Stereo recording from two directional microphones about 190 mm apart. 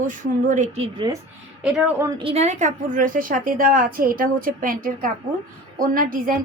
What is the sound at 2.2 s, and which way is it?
A woman's voice, 35° right (ahead or behind).